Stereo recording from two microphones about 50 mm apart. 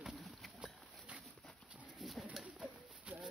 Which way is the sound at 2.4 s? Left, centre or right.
Right.